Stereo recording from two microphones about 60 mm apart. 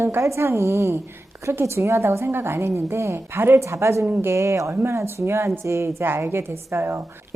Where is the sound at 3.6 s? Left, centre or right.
Right.